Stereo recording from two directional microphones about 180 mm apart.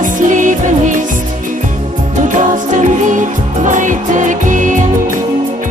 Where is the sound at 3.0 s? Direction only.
45° right (ahead or behind).